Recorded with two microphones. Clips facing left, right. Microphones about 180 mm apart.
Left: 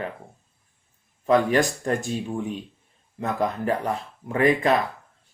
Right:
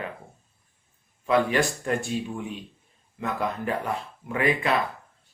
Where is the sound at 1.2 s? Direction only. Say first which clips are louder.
Left 3 dB; 40° left (ahead or behind).